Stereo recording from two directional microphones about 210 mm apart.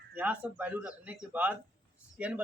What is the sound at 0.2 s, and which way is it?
A man's voice, 10° right (ahead or behind).